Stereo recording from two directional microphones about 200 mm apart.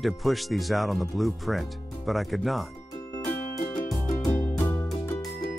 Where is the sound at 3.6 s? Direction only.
40° left (ahead or behind).